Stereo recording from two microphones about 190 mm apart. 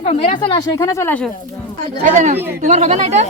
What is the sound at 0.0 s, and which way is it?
A woman's voice, 35° left (ahead or behind).